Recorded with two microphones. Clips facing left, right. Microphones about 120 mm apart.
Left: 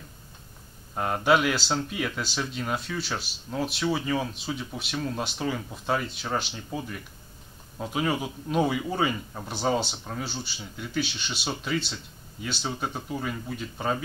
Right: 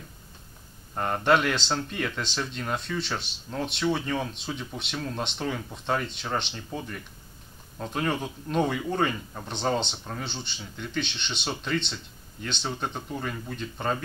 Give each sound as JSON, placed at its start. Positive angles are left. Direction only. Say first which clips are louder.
{"t": 0.9, "sound": "speech", "louder": "even", "side_deg": 5}